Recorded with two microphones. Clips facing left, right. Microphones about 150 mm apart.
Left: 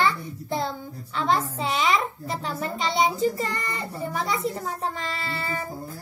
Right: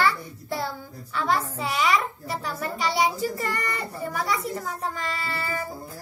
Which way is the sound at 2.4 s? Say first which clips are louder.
Even; 25° left (ahead or behind).